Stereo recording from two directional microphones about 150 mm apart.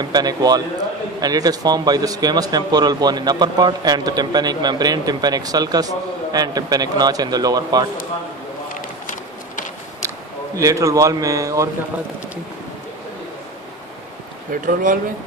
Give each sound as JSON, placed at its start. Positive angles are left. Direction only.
{"t": 0.0, "sound": "speech", "side_deg": -25}
{"t": 10.0, "sound": "speech", "side_deg": -20}
{"t": 14.5, "sound": "speech", "side_deg": -65}